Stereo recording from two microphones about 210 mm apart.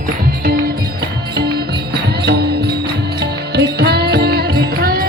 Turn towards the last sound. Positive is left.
turn(degrees=-45)  # may be behind; listen again after turning